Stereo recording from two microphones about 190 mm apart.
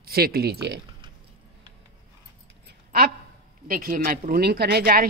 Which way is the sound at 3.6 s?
50° right (ahead or behind).